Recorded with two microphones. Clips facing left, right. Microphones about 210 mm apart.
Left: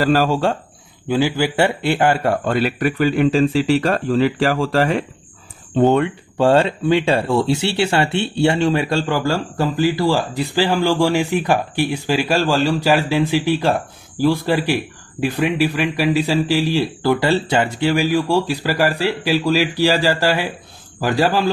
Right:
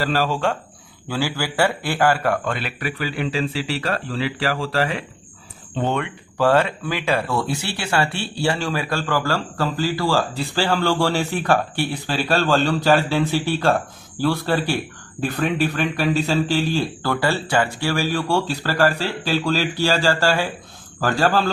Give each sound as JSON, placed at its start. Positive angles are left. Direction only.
{"t": 0.0, "sound": "a man's voice", "side_deg": 45}
{"t": 1.0, "sound": "a man's voice", "side_deg": 20}
{"t": 5.9, "sound": "speech", "side_deg": 30}